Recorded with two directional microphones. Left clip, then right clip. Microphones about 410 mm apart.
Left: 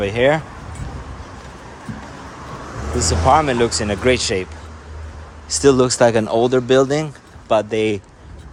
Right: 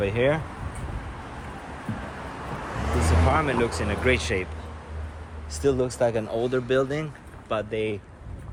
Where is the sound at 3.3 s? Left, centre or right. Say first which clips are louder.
Left 11 dB; centre.